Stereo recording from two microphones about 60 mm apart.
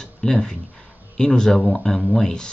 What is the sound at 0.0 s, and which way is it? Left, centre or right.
Speech, centre.